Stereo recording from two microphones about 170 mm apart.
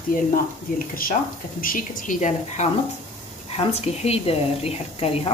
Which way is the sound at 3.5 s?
40° left (ahead or behind).